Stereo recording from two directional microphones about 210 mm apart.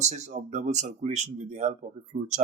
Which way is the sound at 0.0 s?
35° right (ahead or behind).